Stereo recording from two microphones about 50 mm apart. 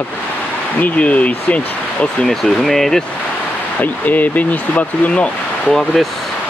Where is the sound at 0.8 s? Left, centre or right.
Left.